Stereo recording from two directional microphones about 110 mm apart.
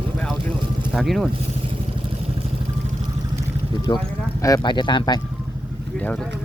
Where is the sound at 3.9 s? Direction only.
45° left (ahead or behind).